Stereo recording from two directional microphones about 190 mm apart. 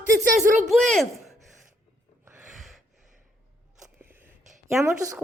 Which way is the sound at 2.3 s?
5° right (ahead or behind).